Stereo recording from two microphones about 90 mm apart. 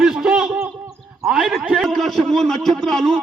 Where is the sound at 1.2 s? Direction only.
10° right (ahead or behind).